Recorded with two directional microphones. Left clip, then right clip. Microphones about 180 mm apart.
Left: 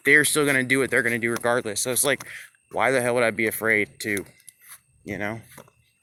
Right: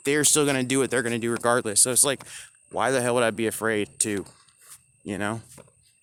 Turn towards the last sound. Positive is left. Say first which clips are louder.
# even
turn(degrees=-30)  # may be behind; listen again after turning